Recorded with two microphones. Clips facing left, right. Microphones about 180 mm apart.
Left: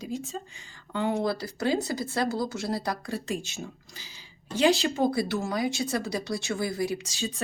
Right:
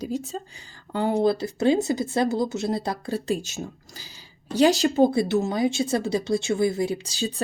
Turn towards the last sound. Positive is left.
turn(degrees=-35)  # may be behind; listen again after turning